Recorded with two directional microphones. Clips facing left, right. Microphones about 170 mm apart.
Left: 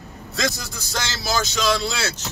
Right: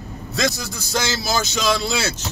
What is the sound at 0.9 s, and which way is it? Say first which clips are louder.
Speech: right 3 dB; 5° right (ahead or behind).